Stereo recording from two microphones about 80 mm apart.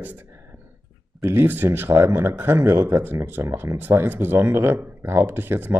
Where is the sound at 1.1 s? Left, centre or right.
Right.